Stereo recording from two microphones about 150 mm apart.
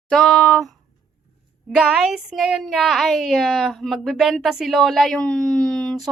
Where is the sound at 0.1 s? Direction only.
5° left (ahead or behind).